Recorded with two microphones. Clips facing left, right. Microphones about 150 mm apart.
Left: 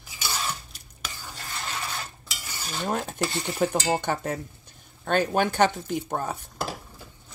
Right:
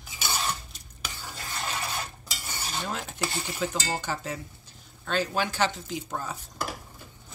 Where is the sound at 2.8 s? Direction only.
45° left (ahead or behind).